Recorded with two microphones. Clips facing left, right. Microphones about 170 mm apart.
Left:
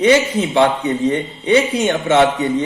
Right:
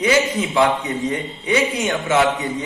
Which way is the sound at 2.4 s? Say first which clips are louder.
Left 7 dB; 65° left (ahead or behind).